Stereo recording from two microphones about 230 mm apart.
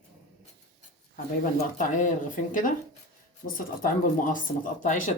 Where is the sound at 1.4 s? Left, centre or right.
Left.